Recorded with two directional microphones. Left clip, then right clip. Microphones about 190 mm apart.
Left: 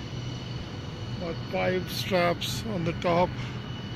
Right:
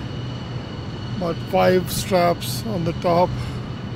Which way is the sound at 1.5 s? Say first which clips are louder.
Right 11 dB; 30° right (ahead or behind).